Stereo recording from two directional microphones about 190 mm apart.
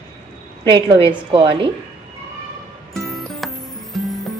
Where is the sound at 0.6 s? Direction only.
25° right (ahead or behind).